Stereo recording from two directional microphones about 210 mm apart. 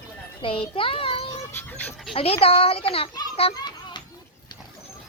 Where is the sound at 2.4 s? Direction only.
25° left (ahead or behind).